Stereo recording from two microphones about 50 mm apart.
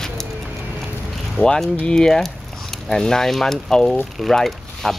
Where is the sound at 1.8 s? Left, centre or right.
Centre.